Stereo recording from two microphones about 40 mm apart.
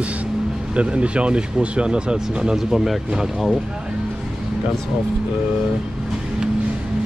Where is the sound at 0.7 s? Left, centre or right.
Right.